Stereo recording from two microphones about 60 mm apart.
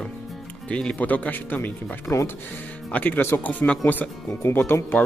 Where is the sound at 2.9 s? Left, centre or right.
Left.